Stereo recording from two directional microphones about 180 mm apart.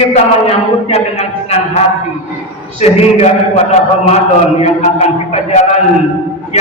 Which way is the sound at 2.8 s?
35° left (ahead or behind).